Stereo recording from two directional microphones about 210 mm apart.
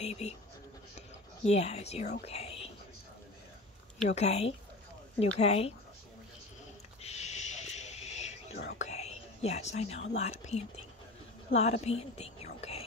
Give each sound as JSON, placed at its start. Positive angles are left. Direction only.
{"t": 0.0, "sound": "speech", "side_deg": 30}
{"t": 1.5, "sound": "speech", "side_deg": 30}
{"t": 2.2, "sound": "whispering", "side_deg": 30}
{"t": 4.1, "sound": "speech", "side_deg": 30}
{"t": 7.0, "sound": "a sound", "side_deg": 30}
{"t": 8.7, "sound": "whispering", "side_deg": 30}
{"t": 10.1, "sound": "speech", "side_deg": 30}